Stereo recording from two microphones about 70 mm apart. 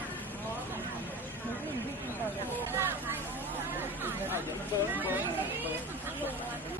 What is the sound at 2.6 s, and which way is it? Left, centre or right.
Hubbub, right.